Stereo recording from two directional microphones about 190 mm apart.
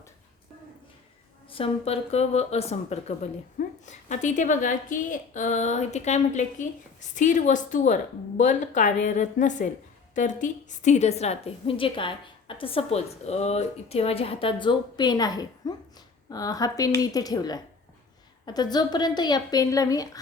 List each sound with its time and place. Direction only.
1.5 s a woman's voice: 30° left (ahead or behind)